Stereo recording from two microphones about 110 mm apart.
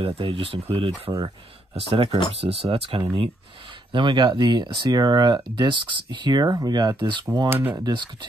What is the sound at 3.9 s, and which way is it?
Speech, 45° right (ahead or behind).